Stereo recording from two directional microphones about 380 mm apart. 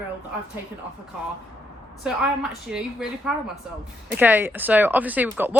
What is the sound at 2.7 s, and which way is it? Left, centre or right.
Speech, centre.